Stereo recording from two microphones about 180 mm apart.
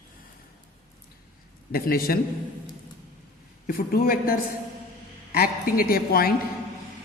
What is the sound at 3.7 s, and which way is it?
A woman's voice, 55° left (ahead or behind).